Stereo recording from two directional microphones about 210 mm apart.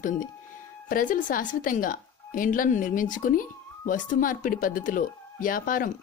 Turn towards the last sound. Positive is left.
turn(degrees=40)  # may be behind; listen again after turning